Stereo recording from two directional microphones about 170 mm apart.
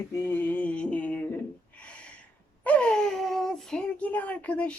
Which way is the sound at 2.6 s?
10° left (ahead or behind).